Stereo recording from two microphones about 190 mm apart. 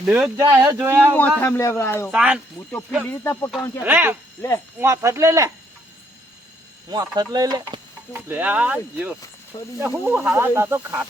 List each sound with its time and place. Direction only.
0.0 s speech: 5° right (ahead or behind)
1.4 s speech: 15° left (ahead or behind)
2.0 s speech: 5° right (ahead or behind)
3.0 s speech: 15° left (ahead or behind)
3.8 s speech: 10° right (ahead or behind)
4.4 s speech: 10° left (ahead or behind)
4.8 s speech: 15° right (ahead or behind)
6.9 s speech: 20° right (ahead or behind)